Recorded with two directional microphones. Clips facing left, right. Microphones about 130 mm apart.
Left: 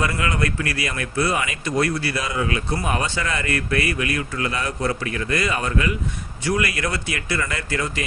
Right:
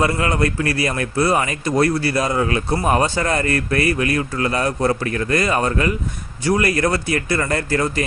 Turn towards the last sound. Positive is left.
turn(degrees=-40)  # may be behind; listen again after turning